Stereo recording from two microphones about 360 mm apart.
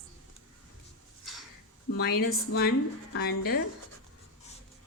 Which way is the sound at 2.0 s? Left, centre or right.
Left.